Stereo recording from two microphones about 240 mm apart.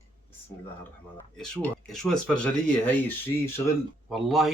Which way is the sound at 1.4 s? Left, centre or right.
Centre.